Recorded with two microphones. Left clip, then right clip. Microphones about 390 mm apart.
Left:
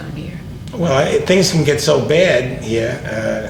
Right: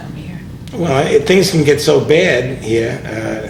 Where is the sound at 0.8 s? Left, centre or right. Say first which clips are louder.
Right 2 dB; right.